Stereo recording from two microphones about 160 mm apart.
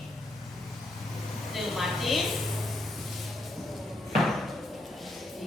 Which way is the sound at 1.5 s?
Centre (ahead or behind).